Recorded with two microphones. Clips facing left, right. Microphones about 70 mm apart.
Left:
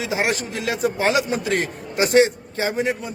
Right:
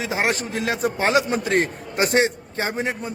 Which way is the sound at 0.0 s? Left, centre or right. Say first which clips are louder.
Even; right.